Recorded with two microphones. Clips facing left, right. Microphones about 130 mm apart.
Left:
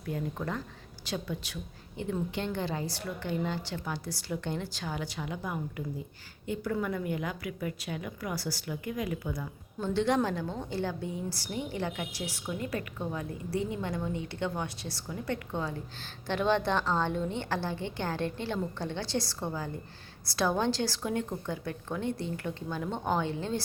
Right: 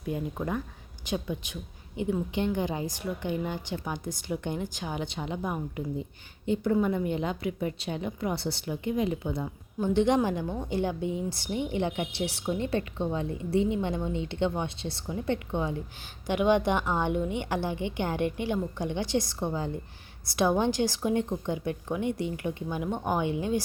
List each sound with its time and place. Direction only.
0.0 s a woman's voice: 15° right (ahead or behind)